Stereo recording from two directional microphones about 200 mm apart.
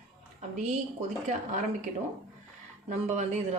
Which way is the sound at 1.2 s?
40° right (ahead or behind).